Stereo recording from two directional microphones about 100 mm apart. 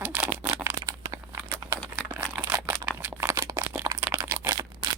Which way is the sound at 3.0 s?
20° right (ahead or behind).